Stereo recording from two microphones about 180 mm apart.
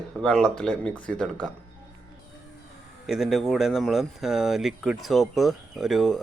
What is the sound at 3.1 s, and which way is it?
Speech, centre (ahead or behind).